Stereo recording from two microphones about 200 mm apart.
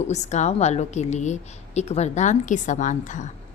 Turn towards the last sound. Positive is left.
turn(degrees=40)  # may be behind; listen again after turning